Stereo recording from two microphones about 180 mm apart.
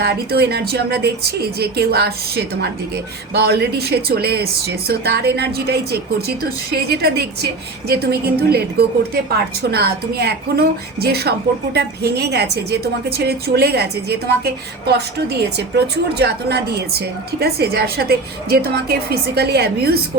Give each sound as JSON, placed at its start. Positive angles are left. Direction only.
{"t": 0.0, "sound": "a woman's voice", "side_deg": -60}